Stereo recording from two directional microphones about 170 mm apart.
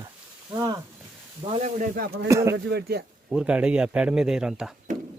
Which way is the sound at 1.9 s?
65° right (ahead or behind).